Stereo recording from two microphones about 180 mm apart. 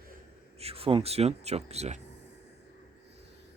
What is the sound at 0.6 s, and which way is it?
Speech, 30° right (ahead or behind).